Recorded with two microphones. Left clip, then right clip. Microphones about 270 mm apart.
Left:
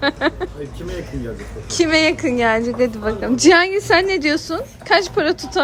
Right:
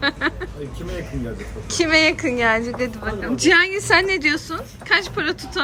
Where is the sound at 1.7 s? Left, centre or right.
Centre.